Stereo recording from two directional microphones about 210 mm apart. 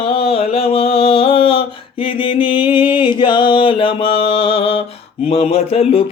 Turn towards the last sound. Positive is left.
turn(degrees=30)  # may be behind; listen again after turning